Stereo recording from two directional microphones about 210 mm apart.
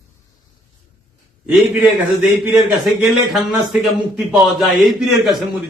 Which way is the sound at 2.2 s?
5° right (ahead or behind).